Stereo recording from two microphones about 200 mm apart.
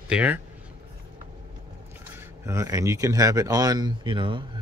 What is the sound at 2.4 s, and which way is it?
Speech, 15° right (ahead or behind).